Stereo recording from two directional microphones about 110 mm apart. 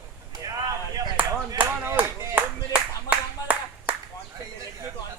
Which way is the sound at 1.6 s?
15° right (ahead or behind).